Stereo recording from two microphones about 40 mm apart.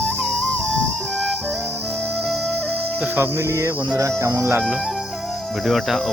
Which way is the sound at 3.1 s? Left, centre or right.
Right.